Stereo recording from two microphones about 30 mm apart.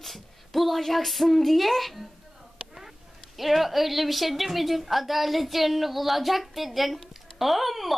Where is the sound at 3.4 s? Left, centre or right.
Centre.